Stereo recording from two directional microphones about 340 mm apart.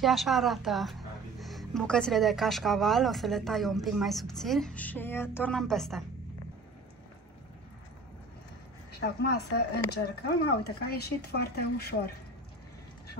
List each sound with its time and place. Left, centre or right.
0.0 s speech: centre
9.0 s speech: left